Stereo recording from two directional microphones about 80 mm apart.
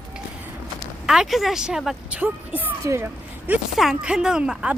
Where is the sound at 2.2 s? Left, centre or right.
Right.